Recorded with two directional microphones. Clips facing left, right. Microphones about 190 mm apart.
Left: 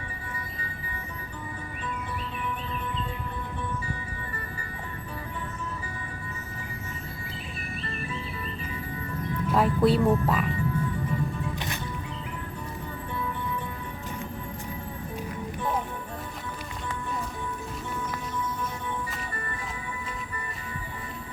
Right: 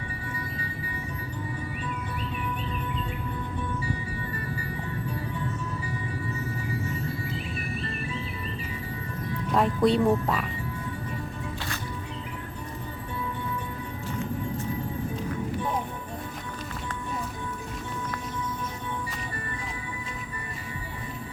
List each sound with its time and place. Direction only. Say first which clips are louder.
9.5 s music: even; 5° left (ahead or behind)
10.2 s speech: left 2 dB; centre (ahead or behind)